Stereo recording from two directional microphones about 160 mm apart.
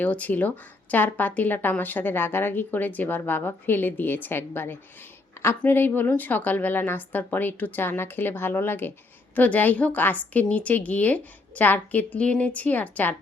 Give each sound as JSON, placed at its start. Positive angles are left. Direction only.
{"t": 0.0, "sound": "a woman's voice", "side_deg": 10}